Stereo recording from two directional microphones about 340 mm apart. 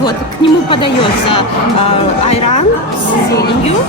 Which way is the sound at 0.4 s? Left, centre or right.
Centre.